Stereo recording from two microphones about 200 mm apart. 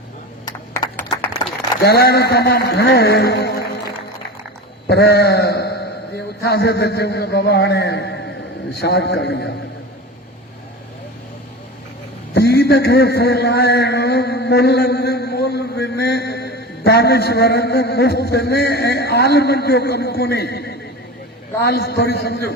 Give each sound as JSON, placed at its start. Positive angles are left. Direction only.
{"t": 0.4, "sound": "a sound", "side_deg": 10}
{"t": 1.8, "sound": "a man's voice", "side_deg": 50}
{"t": 4.9, "sound": "a man's voice", "side_deg": 55}
{"t": 12.3, "sound": "a man's voice", "side_deg": 55}